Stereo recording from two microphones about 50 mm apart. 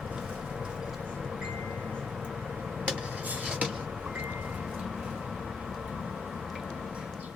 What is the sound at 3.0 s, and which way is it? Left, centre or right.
Vehicle, right.